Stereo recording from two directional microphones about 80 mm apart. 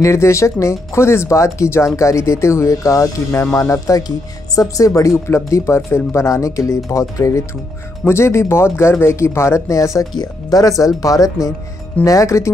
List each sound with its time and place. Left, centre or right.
0.0 s speech: left
10.1 s speech: left